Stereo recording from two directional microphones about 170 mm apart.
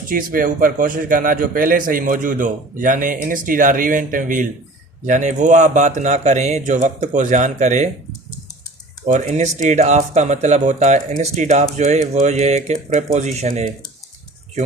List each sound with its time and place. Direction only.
0.1 s a man's voice: 55° right (ahead or behind)
9.0 s a man's voice: 45° right (ahead or behind)